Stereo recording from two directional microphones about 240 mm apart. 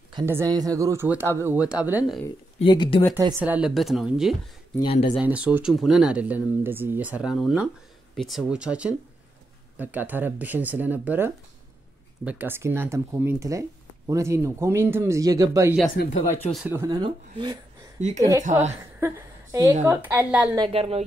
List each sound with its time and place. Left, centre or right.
0.1 s speech: centre
2.6 s speech: left
3.2 s speech: centre
4.8 s speech: left
5.1 s speech: centre
16.0 s speech: left
16.6 s speech: centre
18.4 s speech: right
18.9 s a woman's voice: centre
20.5 s speech: right